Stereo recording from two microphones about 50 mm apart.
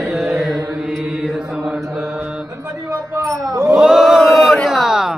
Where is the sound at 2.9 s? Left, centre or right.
Right.